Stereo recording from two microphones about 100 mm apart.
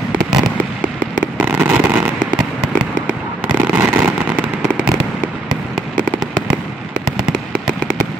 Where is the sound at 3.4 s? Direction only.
15° right (ahead or behind).